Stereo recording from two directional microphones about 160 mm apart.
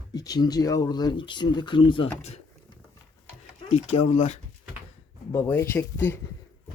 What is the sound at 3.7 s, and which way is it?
Speech, 40° left (ahead or behind).